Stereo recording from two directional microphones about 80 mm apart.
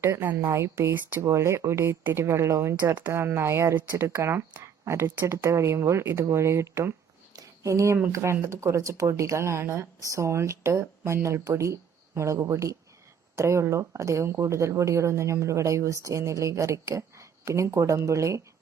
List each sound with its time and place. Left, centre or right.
0.0 s speech: right